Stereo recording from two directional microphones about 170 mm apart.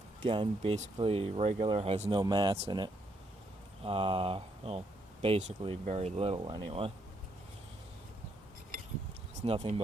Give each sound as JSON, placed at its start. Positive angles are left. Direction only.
{"t": 0.2, "sound": "speech", "side_deg": -30}
{"t": 9.4, "sound": "speech", "side_deg": -35}